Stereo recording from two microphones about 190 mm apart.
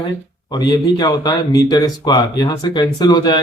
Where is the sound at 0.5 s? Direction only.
20° left (ahead or behind).